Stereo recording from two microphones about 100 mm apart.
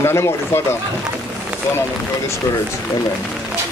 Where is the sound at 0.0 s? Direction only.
25° left (ahead or behind).